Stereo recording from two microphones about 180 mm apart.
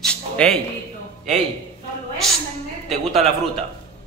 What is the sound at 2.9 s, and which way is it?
Speech, centre (ahead or behind).